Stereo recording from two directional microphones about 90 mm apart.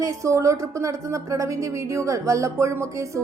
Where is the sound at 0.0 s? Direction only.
35° right (ahead or behind).